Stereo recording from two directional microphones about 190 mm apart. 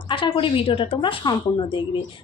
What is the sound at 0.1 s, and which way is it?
A woman's voice, 25° left (ahead or behind).